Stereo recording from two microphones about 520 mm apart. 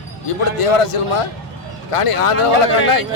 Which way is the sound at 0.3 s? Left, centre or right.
Left.